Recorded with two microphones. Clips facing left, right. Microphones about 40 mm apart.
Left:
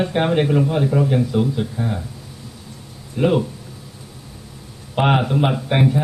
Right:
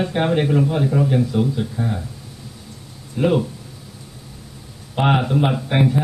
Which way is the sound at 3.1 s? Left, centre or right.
Centre.